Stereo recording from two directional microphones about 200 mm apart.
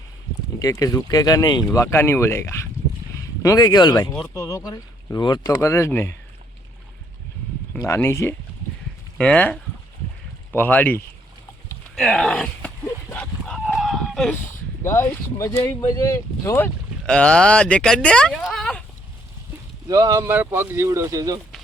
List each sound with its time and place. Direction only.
0.6 s speech: 15° left (ahead or behind)
7.7 s speech: 15° left (ahead or behind)
11.9 s livestock: centre (ahead or behind)
14.8 s speech: 15° left (ahead or behind)
19.9 s speech: 15° right (ahead or behind)